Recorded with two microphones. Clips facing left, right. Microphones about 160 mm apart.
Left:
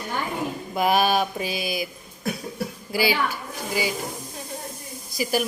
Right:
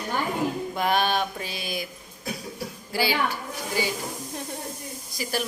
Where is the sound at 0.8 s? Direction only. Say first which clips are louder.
Left 4 dB; 10° left (ahead or behind).